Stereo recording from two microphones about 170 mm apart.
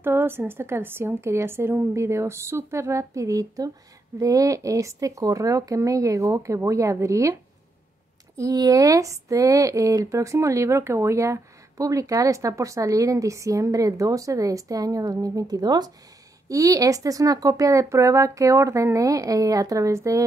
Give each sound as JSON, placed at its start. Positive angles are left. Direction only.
{"t": 0.0, "sound": "a woman's voice", "side_deg": -10}
{"t": 8.4, "sound": "speech", "side_deg": -20}